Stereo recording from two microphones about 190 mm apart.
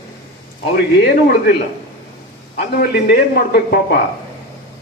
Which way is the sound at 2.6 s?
55° left (ahead or behind).